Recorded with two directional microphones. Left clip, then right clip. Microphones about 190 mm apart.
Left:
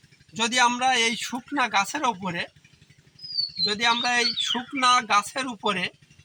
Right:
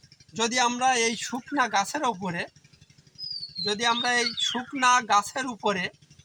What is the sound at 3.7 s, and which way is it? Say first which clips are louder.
Speech: left 1 dB; 20° right (ahead or behind).